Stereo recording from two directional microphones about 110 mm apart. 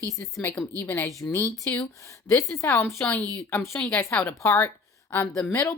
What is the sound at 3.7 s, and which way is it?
Speech, 5° left (ahead or behind).